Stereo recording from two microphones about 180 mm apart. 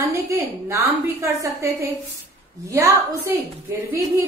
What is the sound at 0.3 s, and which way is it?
A woman's voice, 15° right (ahead or behind).